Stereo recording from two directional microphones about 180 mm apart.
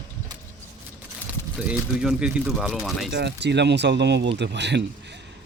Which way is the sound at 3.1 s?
65° right (ahead or behind).